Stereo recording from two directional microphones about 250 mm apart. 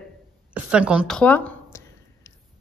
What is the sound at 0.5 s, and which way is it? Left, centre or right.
A woman's voice, centre.